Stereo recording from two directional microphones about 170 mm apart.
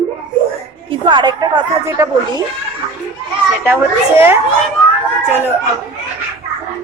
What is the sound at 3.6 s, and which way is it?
Speech, 15° right (ahead or behind).